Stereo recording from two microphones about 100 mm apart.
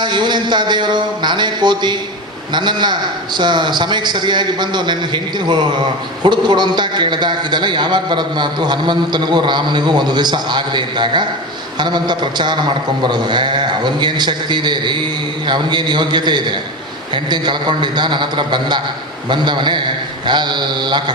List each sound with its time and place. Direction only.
0.0 s a man's voice: 50° right (ahead or behind)